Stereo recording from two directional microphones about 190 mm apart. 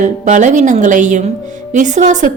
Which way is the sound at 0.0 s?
40° right (ahead or behind).